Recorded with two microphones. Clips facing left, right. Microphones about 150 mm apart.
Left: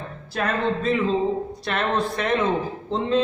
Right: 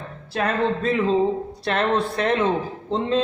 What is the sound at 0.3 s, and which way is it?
A man's voice, 30° right (ahead or behind).